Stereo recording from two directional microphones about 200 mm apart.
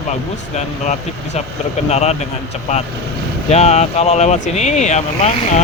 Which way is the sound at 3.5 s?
35° left (ahead or behind).